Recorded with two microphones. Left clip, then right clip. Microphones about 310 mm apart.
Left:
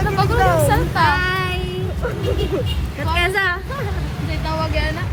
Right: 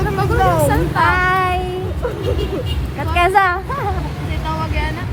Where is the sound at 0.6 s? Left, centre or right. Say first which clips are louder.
Right 1 dB; centre.